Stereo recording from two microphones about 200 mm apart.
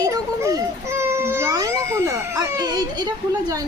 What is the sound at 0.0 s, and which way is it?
Baby cry, 15° right (ahead or behind).